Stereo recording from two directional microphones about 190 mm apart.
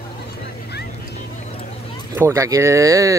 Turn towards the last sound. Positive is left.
turn(degrees=-15)  # may be behind; listen again after turning